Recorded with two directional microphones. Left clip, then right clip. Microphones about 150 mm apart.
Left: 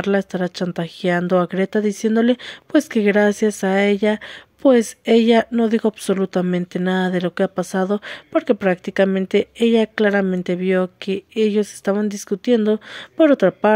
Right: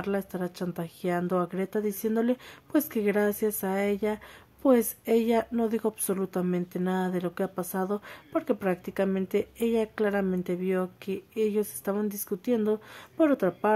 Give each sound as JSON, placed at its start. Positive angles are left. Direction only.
{"t": 0.0, "sound": "a woman's voice", "side_deg": 30}